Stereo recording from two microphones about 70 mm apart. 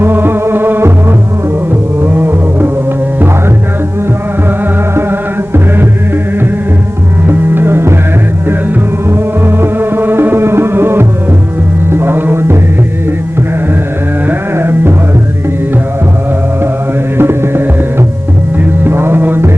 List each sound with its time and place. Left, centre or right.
0.0 s music: right
2.0 s music: right
7.3 s music: right
9.0 s music: right
14.3 s carnatic music: right
17.2 s music: right
18.9 s music: right